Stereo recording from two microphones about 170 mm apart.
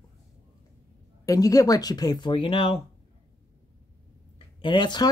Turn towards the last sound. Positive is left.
turn(degrees=25)  # may be behind; listen again after turning